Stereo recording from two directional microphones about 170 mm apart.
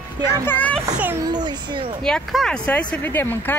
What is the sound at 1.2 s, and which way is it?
Speech, 25° right (ahead or behind).